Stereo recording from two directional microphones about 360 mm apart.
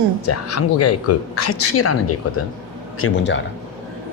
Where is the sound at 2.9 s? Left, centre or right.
Left.